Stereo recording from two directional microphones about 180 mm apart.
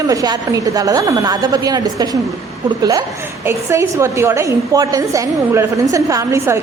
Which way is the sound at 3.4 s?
15° right (ahead or behind).